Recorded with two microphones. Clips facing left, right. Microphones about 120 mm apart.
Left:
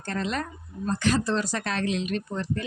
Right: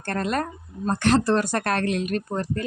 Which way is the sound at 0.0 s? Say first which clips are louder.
Right 4 dB; 55° right (ahead or behind).